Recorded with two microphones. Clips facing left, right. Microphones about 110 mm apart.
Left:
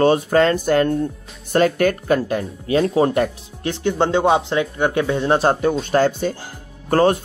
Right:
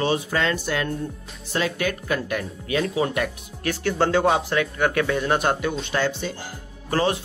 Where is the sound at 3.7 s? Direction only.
25° left (ahead or behind).